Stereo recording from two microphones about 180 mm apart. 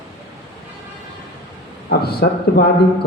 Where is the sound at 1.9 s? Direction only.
60° left (ahead or behind).